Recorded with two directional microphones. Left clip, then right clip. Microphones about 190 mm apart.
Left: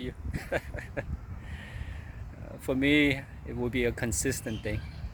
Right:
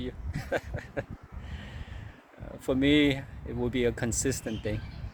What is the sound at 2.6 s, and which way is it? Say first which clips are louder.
Speech: right 1 dB; 15° right (ahead or behind).